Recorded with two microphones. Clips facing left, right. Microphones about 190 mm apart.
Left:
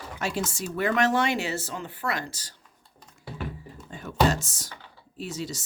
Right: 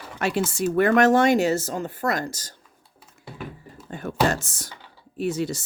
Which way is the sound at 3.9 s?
55° right (ahead or behind).